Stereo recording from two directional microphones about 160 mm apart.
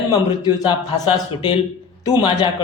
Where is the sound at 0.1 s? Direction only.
25° left (ahead or behind).